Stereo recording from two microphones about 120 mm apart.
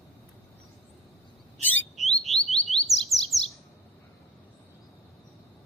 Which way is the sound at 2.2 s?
Centre (ahead or behind).